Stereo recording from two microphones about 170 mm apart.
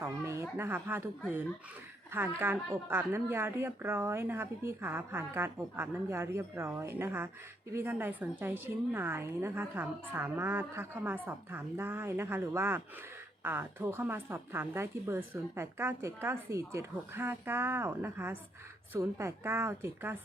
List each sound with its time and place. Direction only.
0.0 s a sound: 15° right (ahead or behind)
0.5 s a woman's voice: 15° right (ahead or behind)
2.1 s a woman's voice: 10° right (ahead or behind)